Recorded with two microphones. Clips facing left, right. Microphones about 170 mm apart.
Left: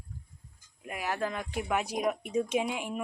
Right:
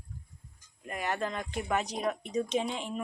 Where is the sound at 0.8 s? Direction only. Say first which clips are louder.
Even; 5° left (ahead or behind).